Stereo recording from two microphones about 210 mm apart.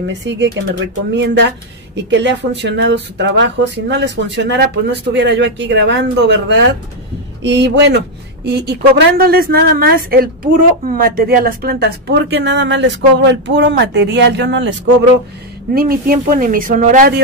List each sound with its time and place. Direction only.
0.0 s a woman's voice: 55° right (ahead or behind)
15.7 s a woman's voice: 45° right (ahead or behind)